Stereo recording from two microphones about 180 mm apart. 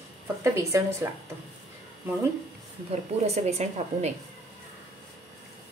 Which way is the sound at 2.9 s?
35° right (ahead or behind).